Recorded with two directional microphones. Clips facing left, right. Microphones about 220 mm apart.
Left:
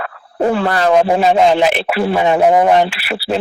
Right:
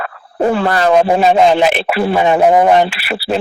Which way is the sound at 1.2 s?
55° right (ahead or behind).